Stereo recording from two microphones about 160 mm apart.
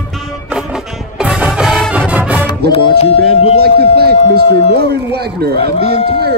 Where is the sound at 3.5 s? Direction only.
75° right (ahead or behind).